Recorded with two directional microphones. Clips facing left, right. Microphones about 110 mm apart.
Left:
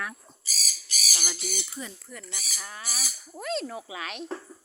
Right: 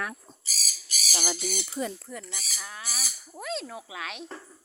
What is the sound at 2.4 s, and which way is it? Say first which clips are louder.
Owl: even; centre (ahead or behind).